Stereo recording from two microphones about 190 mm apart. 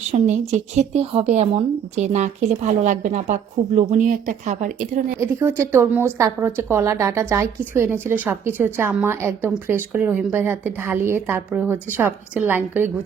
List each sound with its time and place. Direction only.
0.1 s speech: 40° right (ahead or behind)
5.2 s a woman's voice: 15° right (ahead or behind)